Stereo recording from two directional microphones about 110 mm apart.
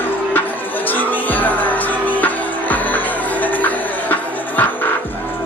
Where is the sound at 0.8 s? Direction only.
15° left (ahead or behind).